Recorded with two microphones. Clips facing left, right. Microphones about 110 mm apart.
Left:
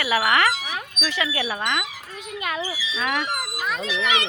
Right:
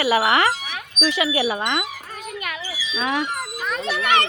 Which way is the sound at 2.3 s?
25° left (ahead or behind).